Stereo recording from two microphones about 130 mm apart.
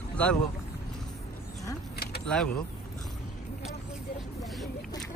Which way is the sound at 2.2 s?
5° left (ahead or behind).